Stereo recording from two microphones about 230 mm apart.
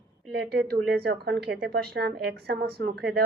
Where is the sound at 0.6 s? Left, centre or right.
Right.